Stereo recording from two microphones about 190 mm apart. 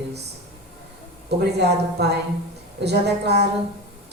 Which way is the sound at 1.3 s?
60° right (ahead or behind).